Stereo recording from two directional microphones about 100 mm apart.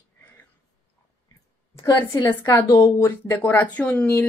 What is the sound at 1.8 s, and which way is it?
Speech, 40° left (ahead or behind).